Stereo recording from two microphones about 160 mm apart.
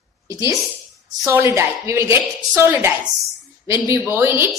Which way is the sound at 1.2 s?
15° right (ahead or behind).